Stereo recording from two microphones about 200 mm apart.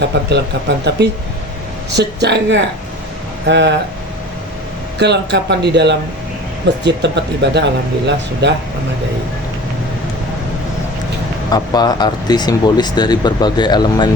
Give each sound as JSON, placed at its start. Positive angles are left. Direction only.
{"t": 0.1, "sound": "speech", "side_deg": -55}
{"t": 4.9, "sound": "speech", "side_deg": -60}
{"t": 11.5, "sound": "speech", "side_deg": 20}